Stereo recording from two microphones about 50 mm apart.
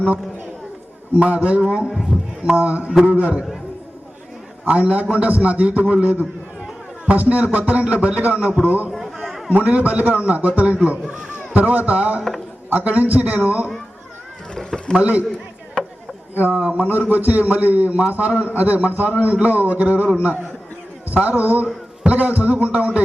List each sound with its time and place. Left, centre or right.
1.1 s a man's voice: right
1.9 s a man's voice: centre
2.6 s a man's voice: right
4.6 s a man's voice: right
8.9 s a sound: centre
9.5 s a man's voice: right
14.5 s a sound: centre
14.9 s a man's voice: right
15.8 s chop: centre
16.4 s a man's voice: right
21.1 s a man's voice: right